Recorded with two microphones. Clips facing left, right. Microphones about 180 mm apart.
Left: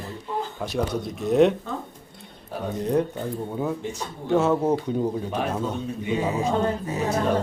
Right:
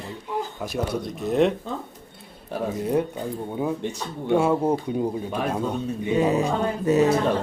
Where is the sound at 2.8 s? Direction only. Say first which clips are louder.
Left 2 dB; 10° right (ahead or behind).